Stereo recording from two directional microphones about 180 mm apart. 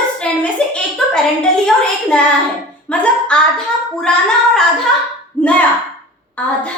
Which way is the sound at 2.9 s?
5° left (ahead or behind).